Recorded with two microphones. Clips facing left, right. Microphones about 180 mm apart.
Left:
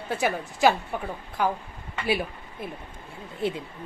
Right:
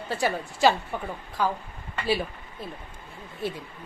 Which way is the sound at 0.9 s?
10° left (ahead or behind).